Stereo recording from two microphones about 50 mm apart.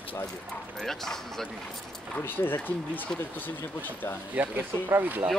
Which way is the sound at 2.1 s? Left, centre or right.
Left.